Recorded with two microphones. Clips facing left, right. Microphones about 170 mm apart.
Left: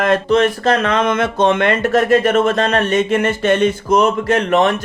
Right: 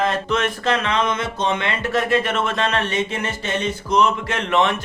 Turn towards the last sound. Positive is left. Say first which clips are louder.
# left 6 dB
turn(degrees=40)  # may be behind; listen again after turning